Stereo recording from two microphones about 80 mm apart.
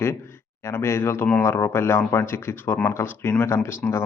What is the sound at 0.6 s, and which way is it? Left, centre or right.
A man's voice, left.